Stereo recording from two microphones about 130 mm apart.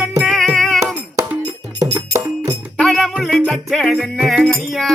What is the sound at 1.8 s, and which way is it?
Music, 25° right (ahead or behind).